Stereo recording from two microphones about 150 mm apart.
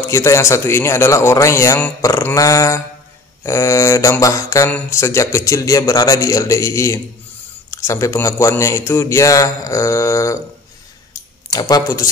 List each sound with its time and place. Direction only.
0.1 s a man's voice: 20° left (ahead or behind)
11.5 s a man's voice: 25° left (ahead or behind)